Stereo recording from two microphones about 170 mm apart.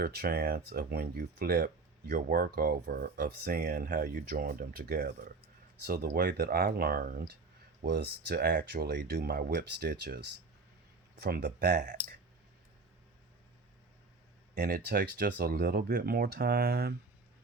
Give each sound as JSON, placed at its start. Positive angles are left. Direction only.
{"t": 0.0, "sound": "speech", "side_deg": -65}
{"t": 7.9, "sound": "speech", "side_deg": -80}
{"t": 11.7, "sound": "speech", "side_deg": -50}
{"t": 14.5, "sound": "speech", "side_deg": -70}